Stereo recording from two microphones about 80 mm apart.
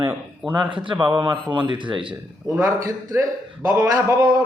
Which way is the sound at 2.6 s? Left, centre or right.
Right.